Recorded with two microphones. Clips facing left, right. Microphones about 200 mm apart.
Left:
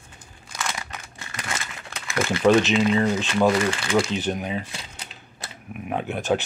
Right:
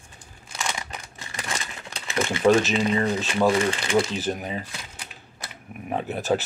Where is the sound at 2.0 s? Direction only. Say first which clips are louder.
Left 1 dB; 25° right (ahead or behind).